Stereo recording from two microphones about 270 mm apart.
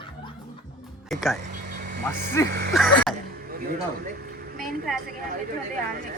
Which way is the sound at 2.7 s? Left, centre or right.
Centre.